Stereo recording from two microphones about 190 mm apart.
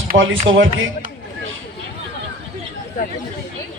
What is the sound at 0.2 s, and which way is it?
Speech, 85° right.